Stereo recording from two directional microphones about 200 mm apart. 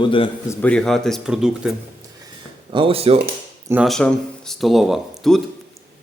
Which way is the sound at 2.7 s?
25° right (ahead or behind).